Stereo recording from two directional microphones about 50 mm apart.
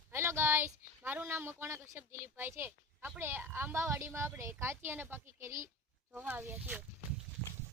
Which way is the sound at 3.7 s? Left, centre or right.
Right.